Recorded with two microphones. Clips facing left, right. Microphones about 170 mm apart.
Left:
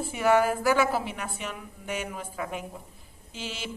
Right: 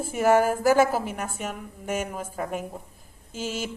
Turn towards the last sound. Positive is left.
turn(degrees=-45)  # may be behind; listen again after turning